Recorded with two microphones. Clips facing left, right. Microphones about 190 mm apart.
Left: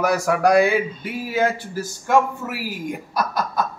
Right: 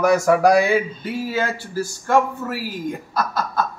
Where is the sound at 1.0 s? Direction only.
15° left (ahead or behind).